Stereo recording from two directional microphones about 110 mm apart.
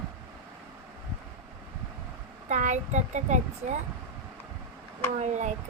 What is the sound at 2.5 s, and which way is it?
A child's voice, 90° right.